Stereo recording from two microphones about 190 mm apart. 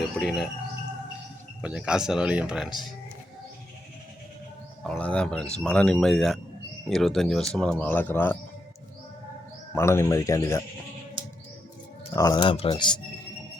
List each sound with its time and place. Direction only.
0.2 s speech: centre (ahead or behind)
1.6 s speech: 5° right (ahead or behind)
4.8 s speech: 5° left (ahead or behind)
9.7 s speech: 15° left (ahead or behind)
12.1 s speech: 20° left (ahead or behind)